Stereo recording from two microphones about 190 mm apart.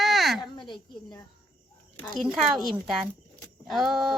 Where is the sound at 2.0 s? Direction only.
5° left (ahead or behind).